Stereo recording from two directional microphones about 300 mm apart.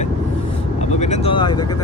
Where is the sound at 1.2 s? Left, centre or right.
Centre.